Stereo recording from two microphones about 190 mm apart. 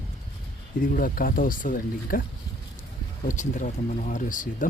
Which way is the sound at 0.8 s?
45° left (ahead or behind).